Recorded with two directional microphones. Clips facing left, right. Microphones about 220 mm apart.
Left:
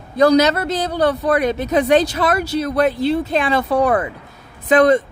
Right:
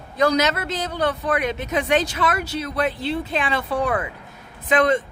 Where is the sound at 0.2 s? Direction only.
35° left (ahead or behind).